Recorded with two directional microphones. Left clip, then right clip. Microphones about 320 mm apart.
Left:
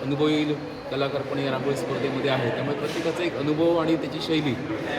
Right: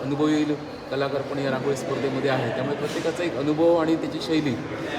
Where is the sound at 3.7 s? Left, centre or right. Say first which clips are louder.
Right 1 dB; centre.